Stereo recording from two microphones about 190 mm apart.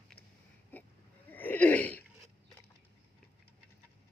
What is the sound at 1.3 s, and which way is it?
Wheeze, 10° left (ahead or behind).